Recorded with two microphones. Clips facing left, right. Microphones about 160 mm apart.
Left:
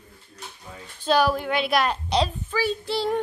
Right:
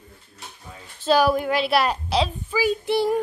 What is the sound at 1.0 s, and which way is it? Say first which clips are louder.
A woman's voice: right 2 dB; 5° right (ahead or behind).